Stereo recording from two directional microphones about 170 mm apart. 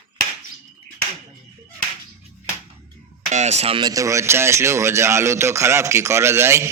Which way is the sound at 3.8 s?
20° right (ahead or behind).